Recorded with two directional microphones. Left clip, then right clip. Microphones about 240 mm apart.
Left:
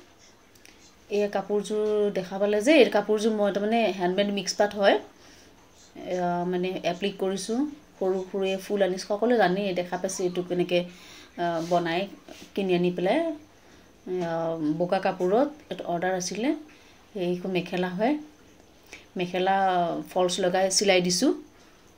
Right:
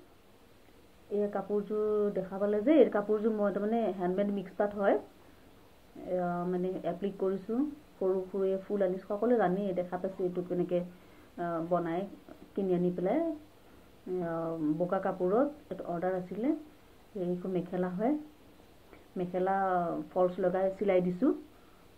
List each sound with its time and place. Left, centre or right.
1.1 s speech: left
6.0 s speech: left
14.2 s speech: left
17.2 s speech: left
19.1 s speech: left